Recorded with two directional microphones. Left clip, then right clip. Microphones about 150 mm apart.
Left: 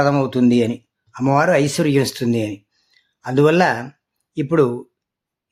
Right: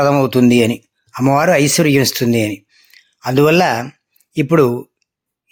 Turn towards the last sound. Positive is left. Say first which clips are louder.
# right 4 dB
turn(degrees=-20)  # may be behind; listen again after turning